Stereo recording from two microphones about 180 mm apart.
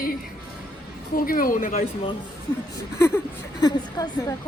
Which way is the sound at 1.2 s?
55° left (ahead or behind).